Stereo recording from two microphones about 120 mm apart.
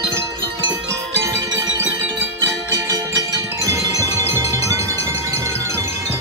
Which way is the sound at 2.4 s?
30° right (ahead or behind).